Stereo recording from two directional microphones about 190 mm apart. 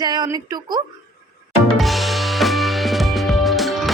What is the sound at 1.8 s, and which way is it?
Music, centre (ahead or behind).